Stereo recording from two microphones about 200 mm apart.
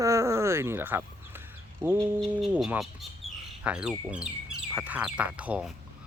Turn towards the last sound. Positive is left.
turn(degrees=-5)  # may be behind; listen again after turning